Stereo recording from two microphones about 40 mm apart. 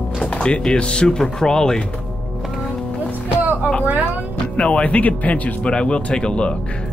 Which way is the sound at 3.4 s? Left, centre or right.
Right.